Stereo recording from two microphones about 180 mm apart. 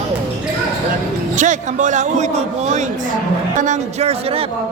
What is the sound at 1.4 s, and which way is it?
A man's voice, 45° right (ahead or behind).